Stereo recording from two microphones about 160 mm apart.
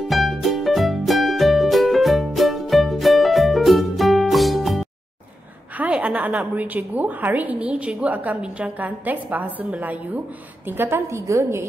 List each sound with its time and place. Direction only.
0.1 s music: centre (ahead or behind)
5.8 s a woman's voice: 10° right (ahead or behind)